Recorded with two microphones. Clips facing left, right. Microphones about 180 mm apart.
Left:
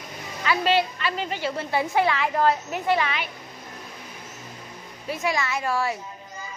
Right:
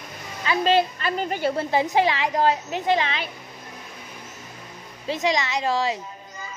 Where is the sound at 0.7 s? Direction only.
45° right (ahead or behind).